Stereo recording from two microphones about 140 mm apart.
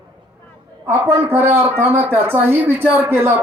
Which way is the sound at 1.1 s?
15° right (ahead or behind).